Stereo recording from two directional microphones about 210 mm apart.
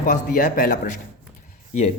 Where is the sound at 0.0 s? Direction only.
40° left (ahead or behind).